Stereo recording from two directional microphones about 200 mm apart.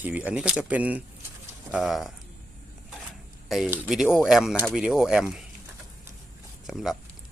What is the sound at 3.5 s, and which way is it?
Speech, 5° right (ahead or behind).